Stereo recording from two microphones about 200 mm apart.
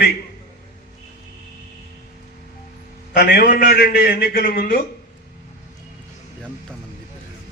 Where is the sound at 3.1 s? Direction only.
50° left (ahead or behind).